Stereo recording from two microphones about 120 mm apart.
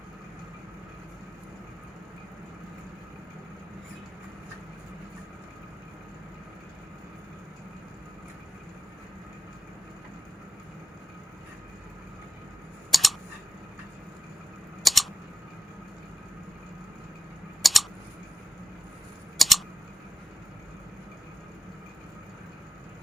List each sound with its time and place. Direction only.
12.9 s camera: centre (ahead or behind)
14.8 s typing: centre (ahead or behind)
17.6 s typing: centre (ahead or behind)
19.4 s typing: centre (ahead or behind)